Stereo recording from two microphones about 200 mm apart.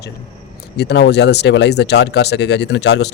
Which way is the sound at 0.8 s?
55° left (ahead or behind).